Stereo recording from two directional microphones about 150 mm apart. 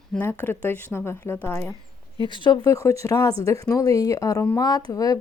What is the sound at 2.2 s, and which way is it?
Speech, 30° left (ahead or behind).